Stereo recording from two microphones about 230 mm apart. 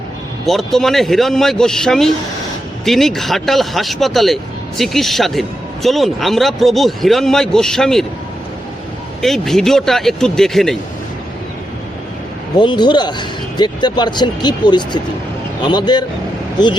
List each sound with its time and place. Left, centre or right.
0.4 s a man's voice: centre
9.2 s a man's voice: centre
12.5 s speech: centre